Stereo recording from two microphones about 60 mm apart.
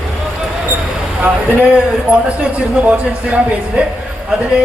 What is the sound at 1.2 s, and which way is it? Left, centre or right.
A man's voice, right.